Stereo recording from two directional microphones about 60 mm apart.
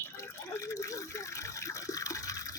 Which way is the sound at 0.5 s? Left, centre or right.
Left.